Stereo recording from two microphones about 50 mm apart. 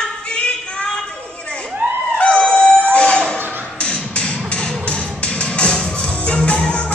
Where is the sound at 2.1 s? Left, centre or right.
Centre.